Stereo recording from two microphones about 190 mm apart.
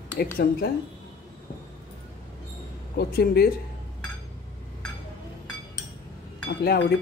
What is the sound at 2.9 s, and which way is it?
Speech, 55° left (ahead or behind).